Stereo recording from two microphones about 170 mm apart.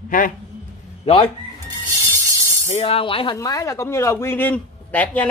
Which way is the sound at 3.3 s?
20° left (ahead or behind).